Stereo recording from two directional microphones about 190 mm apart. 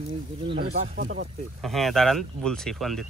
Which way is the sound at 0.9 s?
55° right (ahead or behind).